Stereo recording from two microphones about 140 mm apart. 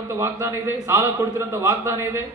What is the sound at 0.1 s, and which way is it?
A man's voice, 20° right (ahead or behind).